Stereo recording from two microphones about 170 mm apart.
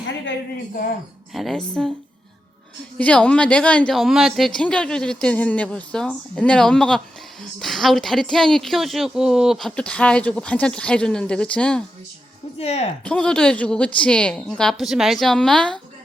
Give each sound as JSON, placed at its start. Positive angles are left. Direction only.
{"t": 1.3, "sound": "a woman's voice", "side_deg": 0}
{"t": 3.0, "sound": "a woman's voice", "side_deg": 5}
{"t": 12.5, "sound": "speech", "side_deg": 40}
{"t": 13.1, "sound": "a woman's voice", "side_deg": 5}